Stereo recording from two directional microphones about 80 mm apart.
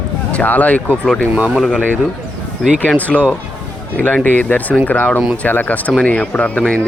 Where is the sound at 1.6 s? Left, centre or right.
Centre.